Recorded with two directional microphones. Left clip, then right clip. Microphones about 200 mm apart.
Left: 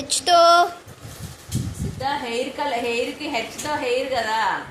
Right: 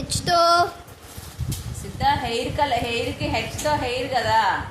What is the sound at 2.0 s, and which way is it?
A woman's voice, 20° right (ahead or behind).